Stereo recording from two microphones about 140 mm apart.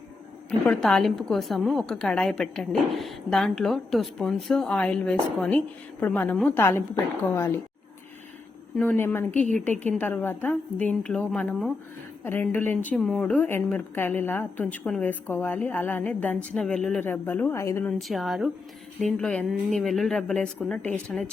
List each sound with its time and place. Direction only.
0.7 s a woman's voice: 5° left (ahead or behind)
8.8 s a woman's voice: 15° left (ahead or behind)
12.2 s a woman's voice: 15° left (ahead or behind)
18.1 s a woman's voice: centre (ahead or behind)